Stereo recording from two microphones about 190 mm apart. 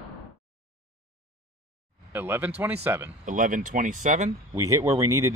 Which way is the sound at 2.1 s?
10° right (ahead or behind).